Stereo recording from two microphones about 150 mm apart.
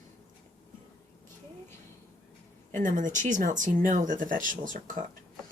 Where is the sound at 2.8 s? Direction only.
55° right (ahead or behind).